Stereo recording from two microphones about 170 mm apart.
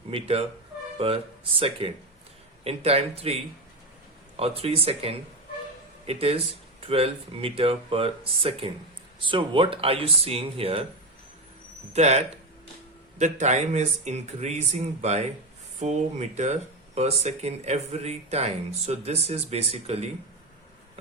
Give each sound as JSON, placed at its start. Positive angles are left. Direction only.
{"t": 0.1, "sound": "speech", "side_deg": -35}
{"t": 4.4, "sound": "speech", "side_deg": -35}
{"t": 11.9, "sound": "speech", "side_deg": -40}